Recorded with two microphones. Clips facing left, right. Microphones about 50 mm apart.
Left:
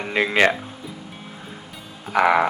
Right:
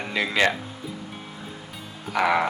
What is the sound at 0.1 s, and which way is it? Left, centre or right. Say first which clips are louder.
Speech: left 4 dB; left.